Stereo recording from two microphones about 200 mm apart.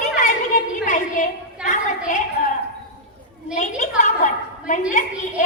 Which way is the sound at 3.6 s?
35° left (ahead or behind).